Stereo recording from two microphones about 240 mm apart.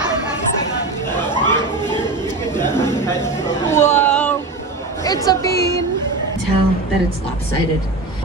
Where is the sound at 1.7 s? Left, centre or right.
Centre.